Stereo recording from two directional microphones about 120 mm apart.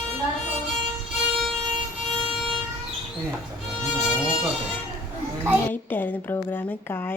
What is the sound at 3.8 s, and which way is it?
Music, 10° right (ahead or behind).